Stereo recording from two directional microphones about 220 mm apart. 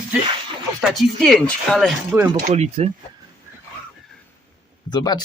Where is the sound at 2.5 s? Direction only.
30° right (ahead or behind).